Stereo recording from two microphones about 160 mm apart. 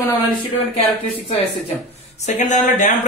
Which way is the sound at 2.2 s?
50° left (ahead or behind).